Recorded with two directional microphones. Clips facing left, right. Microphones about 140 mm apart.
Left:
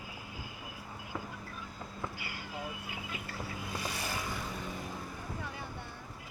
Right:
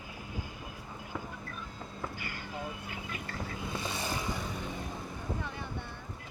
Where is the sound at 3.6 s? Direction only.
25° right (ahead or behind).